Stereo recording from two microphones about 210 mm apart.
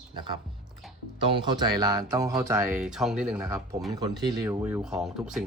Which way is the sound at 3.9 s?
20° right (ahead or behind).